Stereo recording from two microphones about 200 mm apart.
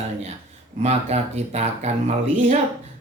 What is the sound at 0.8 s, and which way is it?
Speech, 35° right (ahead or behind).